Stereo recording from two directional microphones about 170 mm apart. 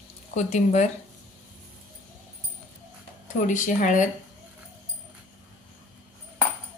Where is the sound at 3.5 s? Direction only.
45° left (ahead or behind).